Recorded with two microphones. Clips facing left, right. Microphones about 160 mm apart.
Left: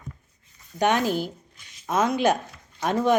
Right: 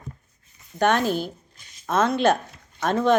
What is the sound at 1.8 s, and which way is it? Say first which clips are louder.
Speech: right 2 dB; 15° left (ahead or behind).